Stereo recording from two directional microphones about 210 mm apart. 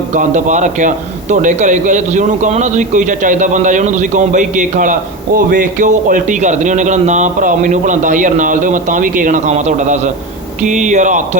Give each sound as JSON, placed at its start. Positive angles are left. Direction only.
{"t": 0.1, "sound": "a man's voice", "side_deg": -35}